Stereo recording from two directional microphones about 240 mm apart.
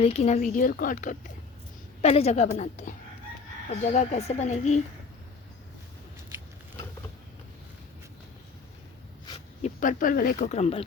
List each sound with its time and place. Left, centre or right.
0.0 s a woman's voice: left
9.6 s speech: left